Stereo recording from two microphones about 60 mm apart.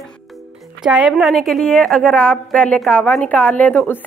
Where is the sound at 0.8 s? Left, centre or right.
Centre; by 4.0 s left.